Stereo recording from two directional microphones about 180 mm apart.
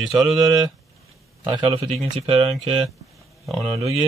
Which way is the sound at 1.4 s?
30° right (ahead or behind).